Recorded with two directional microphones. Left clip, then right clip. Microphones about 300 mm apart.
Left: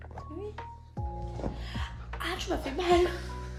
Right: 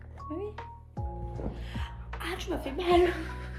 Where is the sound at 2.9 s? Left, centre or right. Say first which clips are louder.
Right 1 dB; centre.